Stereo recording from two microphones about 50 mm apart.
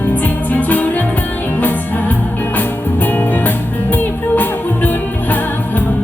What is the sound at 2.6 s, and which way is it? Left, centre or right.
Music, left.